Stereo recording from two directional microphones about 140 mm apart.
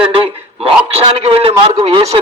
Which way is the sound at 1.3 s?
45° right (ahead or behind).